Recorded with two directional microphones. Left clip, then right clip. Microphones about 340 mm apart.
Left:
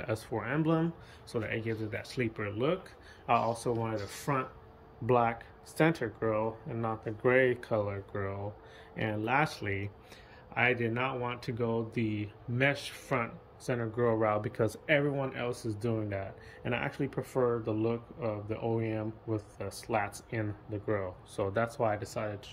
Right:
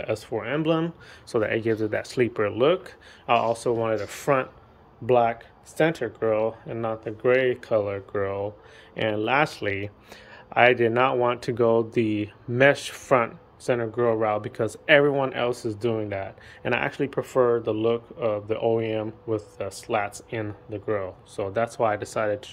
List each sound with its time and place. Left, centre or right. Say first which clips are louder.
0.0 s speech: right 7 dB; centre